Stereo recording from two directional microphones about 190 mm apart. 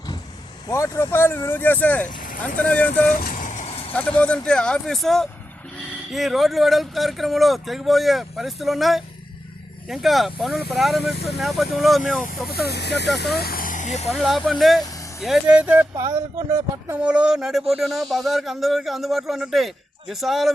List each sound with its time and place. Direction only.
0.7 s speech: 15° left (ahead or behind)
3.1 s vehicle: 50° left (ahead or behind); by 3.9 s 30° left (ahead or behind)
4.4 s speech: 5° left (ahead or behind)
12.6 s speech: 60° left (ahead or behind); by 14.1 s 40° left (ahead or behind)
14.1 s speech: centre (ahead or behind)